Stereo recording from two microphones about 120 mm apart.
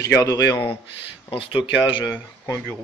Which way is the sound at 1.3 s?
45° left (ahead or behind).